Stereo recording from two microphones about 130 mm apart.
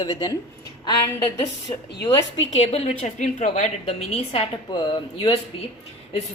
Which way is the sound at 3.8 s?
50° left (ahead or behind).